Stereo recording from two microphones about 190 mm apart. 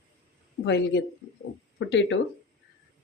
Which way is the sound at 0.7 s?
65° left (ahead or behind).